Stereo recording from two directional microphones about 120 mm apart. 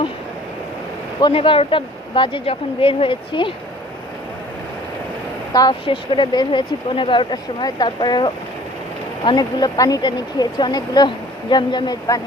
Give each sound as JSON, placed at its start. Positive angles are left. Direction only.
{"t": 1.3, "sound": "speech", "side_deg": 50}
{"t": 5.8, "sound": "speech", "side_deg": 45}